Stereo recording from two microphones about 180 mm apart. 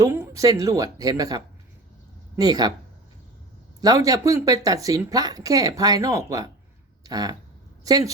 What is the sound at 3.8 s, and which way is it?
Speech, 20° right (ahead or behind).